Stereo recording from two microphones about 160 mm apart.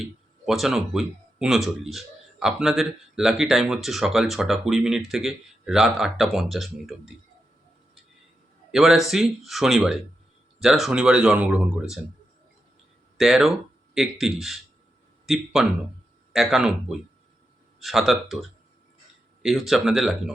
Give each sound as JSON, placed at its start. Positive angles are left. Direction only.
{"t": 0.0, "sound": "speech", "side_deg": 0}
{"t": 8.7, "sound": "speech", "side_deg": 0}
{"t": 13.1, "sound": "speech", "side_deg": 0}
{"t": 16.3, "sound": "speech", "side_deg": 0}